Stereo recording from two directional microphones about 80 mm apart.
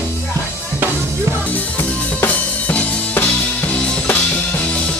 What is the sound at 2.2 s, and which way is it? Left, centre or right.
Music, centre.